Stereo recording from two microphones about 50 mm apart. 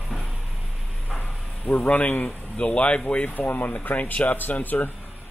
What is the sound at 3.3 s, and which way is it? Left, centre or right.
Speech, left.